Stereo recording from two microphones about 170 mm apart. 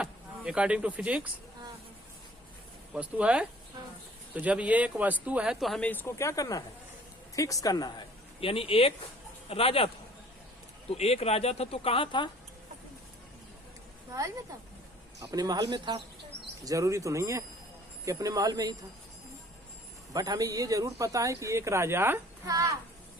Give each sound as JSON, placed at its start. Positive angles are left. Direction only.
{"t": 0.0, "sound": "speech", "side_deg": -5}
{"t": 2.9, "sound": "speech", "side_deg": -5}
{"t": 10.9, "sound": "speech", "side_deg": 35}
{"t": 14.1, "sound": "speech", "side_deg": -20}
{"t": 20.1, "sound": "speech", "side_deg": -20}